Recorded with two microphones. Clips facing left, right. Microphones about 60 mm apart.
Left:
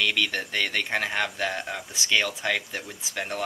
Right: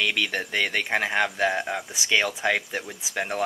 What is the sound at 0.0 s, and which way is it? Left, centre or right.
Speech, centre.